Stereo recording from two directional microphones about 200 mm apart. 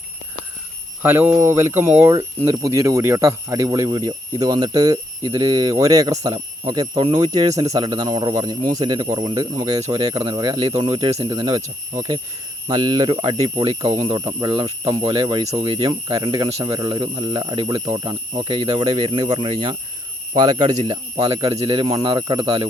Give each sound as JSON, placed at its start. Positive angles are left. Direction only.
{"t": 1.0, "sound": "speech", "side_deg": -10}
{"t": 12.6, "sound": "speech", "side_deg": -20}